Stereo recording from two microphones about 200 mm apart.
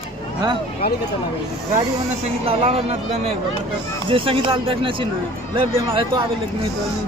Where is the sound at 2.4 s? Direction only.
30° right (ahead or behind).